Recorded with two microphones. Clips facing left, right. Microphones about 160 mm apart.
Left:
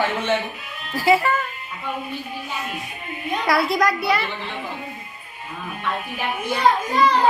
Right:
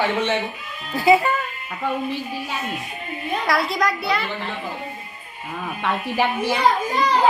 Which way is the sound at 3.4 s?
Centre (ahead or behind).